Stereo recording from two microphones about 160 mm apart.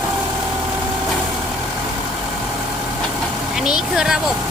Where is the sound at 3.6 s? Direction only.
5° right (ahead or behind).